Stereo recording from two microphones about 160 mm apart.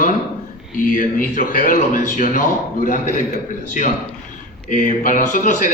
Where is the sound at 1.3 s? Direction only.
60° left (ahead or behind).